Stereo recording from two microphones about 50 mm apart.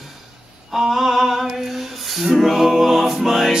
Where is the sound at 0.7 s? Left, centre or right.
Centre.